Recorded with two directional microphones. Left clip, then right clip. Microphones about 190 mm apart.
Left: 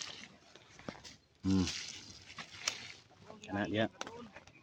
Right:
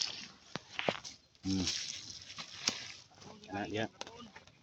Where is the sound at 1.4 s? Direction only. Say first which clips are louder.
Even; 20° right (ahead or behind).